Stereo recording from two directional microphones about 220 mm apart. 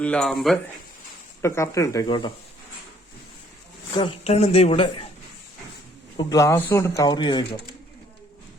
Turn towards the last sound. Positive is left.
turn(degrees=20)  # may be behind; listen again after turning